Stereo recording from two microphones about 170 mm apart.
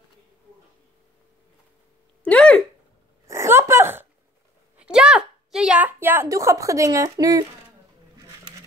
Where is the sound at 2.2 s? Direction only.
10° left (ahead or behind).